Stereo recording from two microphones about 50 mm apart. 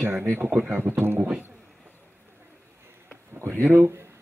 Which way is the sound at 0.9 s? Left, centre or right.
Right.